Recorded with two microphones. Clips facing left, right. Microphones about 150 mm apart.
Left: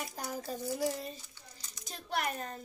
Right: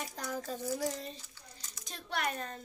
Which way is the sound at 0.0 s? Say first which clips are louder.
Even; 10° left (ahead or behind).